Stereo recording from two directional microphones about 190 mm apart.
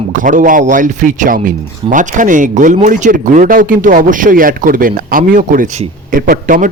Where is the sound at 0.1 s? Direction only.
45° right (ahead or behind).